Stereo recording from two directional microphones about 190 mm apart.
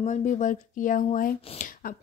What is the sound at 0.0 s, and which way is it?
A woman's voice, 40° left (ahead or behind).